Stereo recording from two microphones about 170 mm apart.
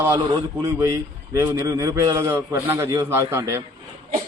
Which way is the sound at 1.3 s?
15° right (ahead or behind).